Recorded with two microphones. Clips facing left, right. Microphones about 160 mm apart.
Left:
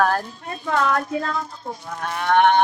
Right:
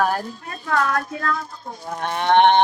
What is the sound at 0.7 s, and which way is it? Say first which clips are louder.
Speech: left 1 dB; 25° left (ahead or behind).